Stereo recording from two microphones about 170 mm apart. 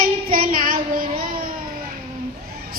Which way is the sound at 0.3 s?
55° right (ahead or behind).